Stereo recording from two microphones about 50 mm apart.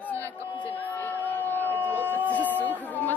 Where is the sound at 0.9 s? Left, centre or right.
Left.